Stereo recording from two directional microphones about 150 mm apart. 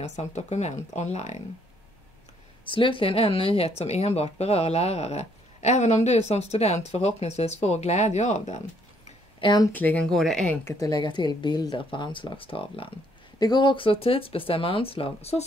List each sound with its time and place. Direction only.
0.0 s speech: 50° left (ahead or behind)
2.6 s speech: 35° left (ahead or behind)
9.4 s speech: 30° left (ahead or behind)
9.7 s speech: 10° left (ahead or behind)
10.6 s speech: 25° left (ahead or behind); by 15.4 s 40° left (ahead or behind)